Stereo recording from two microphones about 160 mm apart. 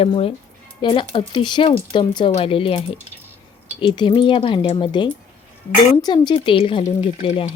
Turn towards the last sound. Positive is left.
turn(degrees=30)  # may be behind; listen again after turning